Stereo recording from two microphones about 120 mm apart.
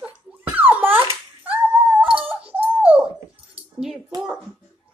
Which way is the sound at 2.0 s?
50° right (ahead or behind).